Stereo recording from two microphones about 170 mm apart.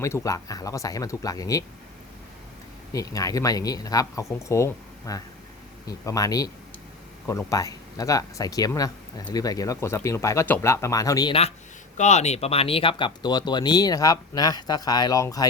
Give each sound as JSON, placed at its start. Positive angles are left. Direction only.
{"t": 0.0, "sound": "speech", "side_deg": 15}
{"t": 2.9, "sound": "speech", "side_deg": 20}
{"t": 11.9, "sound": "speech", "side_deg": 40}